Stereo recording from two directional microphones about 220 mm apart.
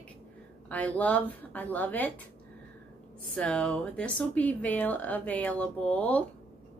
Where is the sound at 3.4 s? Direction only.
5° left (ahead or behind).